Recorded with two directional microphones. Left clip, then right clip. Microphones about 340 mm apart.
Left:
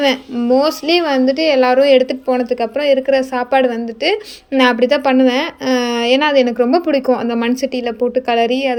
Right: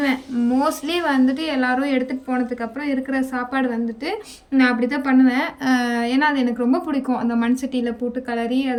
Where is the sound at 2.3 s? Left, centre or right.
Left.